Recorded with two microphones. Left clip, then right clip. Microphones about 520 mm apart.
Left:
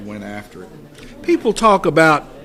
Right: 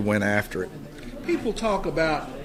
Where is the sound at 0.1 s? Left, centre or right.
Right.